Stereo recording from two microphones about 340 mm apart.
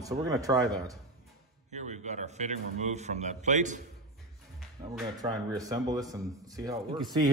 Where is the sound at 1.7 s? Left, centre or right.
Right.